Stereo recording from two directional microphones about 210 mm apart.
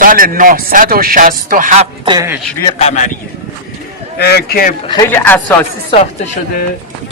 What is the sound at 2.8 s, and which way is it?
Speech, 35° left (ahead or behind).